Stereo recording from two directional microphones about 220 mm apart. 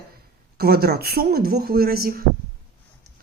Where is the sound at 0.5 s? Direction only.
45° right (ahead or behind).